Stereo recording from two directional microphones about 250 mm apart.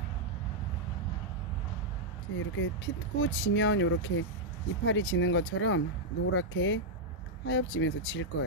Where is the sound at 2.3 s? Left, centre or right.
Left.